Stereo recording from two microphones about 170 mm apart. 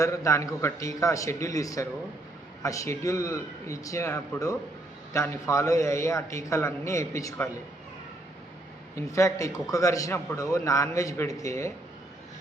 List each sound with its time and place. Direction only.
0.0 s a man's voice: 20° left (ahead or behind)
9.0 s a man's voice: 20° left (ahead or behind)